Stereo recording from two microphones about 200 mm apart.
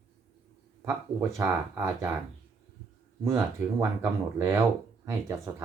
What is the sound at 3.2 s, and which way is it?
Speech, 15° right (ahead or behind).